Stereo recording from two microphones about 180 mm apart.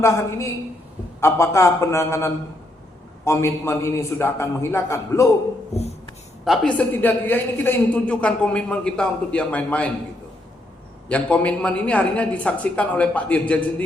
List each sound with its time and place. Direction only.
0.0 s a woman's voice: 15° left (ahead or behind)
6.4 s a woman's voice: centre (ahead or behind)
11.1 s a woman's voice: 5° left (ahead or behind)